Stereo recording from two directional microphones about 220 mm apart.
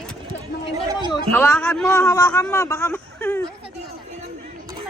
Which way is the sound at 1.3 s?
10° left (ahead or behind).